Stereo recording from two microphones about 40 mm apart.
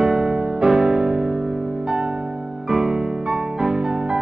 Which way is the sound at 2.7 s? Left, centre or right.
Centre.